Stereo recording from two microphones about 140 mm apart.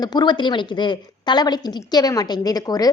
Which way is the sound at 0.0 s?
30° left (ahead or behind).